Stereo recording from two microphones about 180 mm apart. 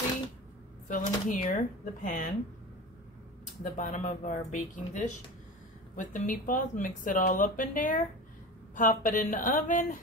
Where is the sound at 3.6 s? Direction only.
45° left (ahead or behind).